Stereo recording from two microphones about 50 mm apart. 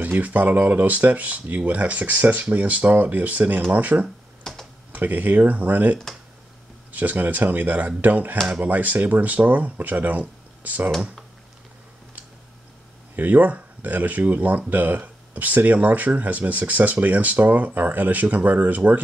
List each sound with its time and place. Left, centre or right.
0.0 s speech: right
4.4 s typing: centre
4.9 s speech: right
13.1 s speech: right